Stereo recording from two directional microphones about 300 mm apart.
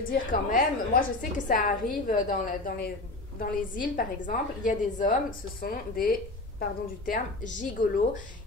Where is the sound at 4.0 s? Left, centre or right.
Left.